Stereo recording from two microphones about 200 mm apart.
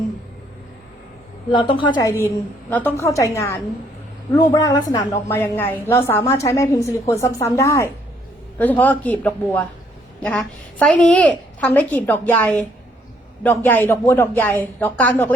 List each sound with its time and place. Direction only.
1.5 s a woman's voice: 25° left (ahead or behind)
2.2 s a woman's voice: 10° left (ahead or behind)